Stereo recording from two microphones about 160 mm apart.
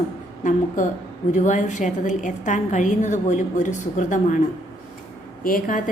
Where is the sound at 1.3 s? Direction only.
50° left (ahead or behind).